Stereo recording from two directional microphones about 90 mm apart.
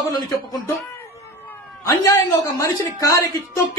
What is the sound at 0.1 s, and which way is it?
Speech, 45° left (ahead or behind).